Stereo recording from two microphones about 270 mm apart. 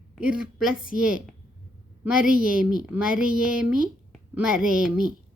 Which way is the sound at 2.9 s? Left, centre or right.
Centre.